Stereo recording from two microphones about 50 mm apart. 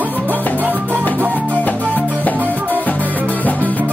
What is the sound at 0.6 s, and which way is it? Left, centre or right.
Music, right.